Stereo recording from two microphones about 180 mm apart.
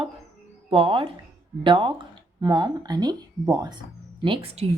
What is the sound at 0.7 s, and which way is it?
Speech, 30° right (ahead or behind).